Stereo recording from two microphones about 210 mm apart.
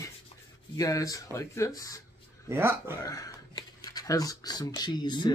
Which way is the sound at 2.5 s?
10° right (ahead or behind).